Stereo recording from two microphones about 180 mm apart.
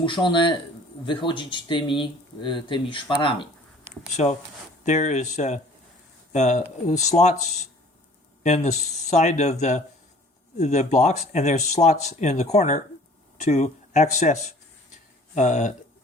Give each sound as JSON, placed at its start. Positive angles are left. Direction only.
{"t": 0.0, "sound": "speech", "side_deg": 25}
{"t": 4.9, "sound": "speech", "side_deg": 40}